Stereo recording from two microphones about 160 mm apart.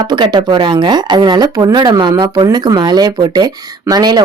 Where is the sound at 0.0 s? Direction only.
25° right (ahead or behind).